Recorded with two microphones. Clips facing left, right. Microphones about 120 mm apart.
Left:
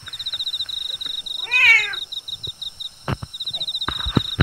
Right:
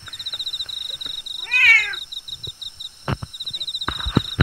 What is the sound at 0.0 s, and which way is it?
Cat, centre (ahead or behind).